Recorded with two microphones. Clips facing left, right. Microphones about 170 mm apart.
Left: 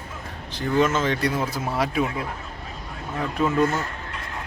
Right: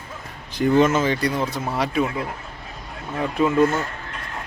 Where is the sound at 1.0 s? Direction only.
Centre (ahead or behind).